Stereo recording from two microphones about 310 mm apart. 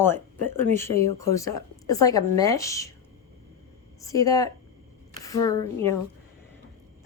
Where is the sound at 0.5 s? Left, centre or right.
Centre.